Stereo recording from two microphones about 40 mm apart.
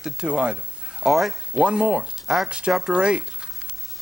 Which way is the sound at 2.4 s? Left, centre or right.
Right.